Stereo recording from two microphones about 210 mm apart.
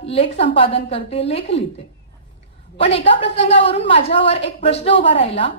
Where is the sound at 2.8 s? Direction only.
25° left (ahead or behind).